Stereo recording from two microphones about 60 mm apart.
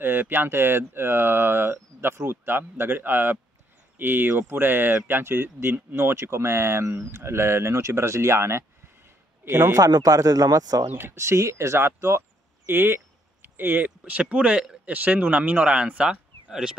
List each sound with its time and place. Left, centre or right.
0.0 s speech: right
9.8 s a man's voice: right
10.9 s speech: right
12.6 s speech: right; by 16.7 s centre